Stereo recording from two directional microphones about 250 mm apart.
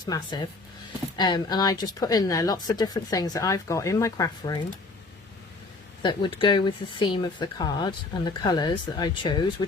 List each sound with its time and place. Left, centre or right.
0.0 s speech: centre
6.0 s speech: centre